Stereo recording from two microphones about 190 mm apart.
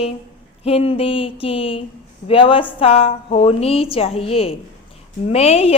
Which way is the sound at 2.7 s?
30° left (ahead or behind).